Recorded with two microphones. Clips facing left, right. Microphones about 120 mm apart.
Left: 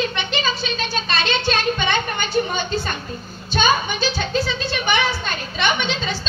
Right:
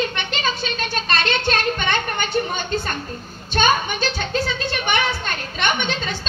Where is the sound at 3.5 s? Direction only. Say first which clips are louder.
Even; 50° right (ahead or behind).